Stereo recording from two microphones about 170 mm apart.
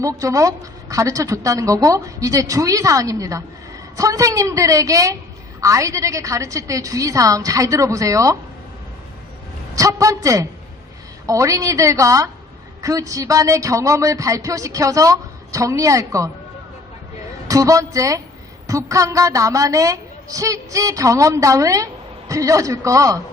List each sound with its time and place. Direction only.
0.0 s speech: 20° right (ahead or behind)
9.7 s speech: 20° right (ahead or behind)
17.5 s speech: 20° right (ahead or behind)